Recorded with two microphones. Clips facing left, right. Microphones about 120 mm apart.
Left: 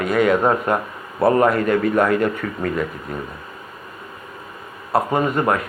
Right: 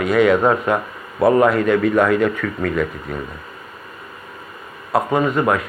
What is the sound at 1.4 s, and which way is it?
Speech, 45° left (ahead or behind).